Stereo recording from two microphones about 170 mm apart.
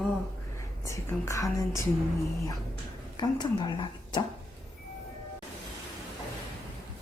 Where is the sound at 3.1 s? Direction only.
25° left (ahead or behind).